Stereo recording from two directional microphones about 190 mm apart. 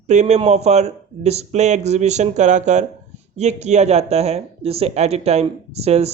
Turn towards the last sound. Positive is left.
turn(degrees=-35)  # may be behind; listen again after turning